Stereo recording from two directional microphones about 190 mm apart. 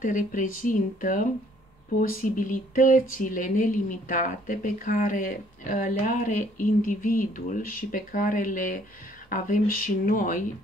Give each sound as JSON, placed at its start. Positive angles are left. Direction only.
{"t": 0.0, "sound": "speech", "side_deg": 45}